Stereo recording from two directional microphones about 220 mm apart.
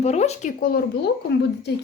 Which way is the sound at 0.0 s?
30° left (ahead or behind).